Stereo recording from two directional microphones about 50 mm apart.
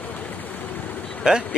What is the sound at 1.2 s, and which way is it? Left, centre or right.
Speech, centre.